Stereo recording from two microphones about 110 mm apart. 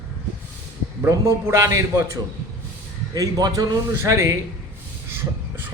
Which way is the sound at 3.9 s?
25° right (ahead or behind).